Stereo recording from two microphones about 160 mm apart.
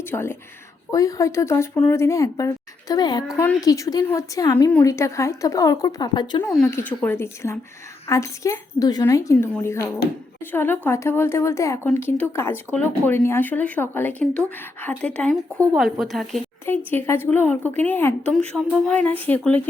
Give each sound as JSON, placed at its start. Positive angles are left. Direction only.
{"t": 0.1, "sound": "speech", "side_deg": 15}
{"t": 6.7, "sound": "speech", "side_deg": 15}
{"t": 16.6, "sound": "speech", "side_deg": 15}